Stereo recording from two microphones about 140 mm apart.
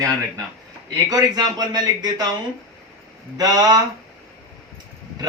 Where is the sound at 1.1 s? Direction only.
30° right (ahead or behind).